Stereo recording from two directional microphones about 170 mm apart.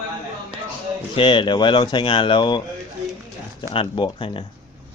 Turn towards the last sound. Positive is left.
turn(degrees=30)  # may be behind; listen again after turning